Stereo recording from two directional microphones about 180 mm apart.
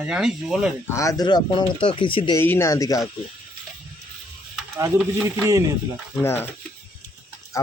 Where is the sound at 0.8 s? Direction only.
15° left (ahead or behind).